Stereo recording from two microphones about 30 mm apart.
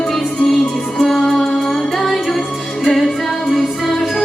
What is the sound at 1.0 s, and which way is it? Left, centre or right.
Music, centre.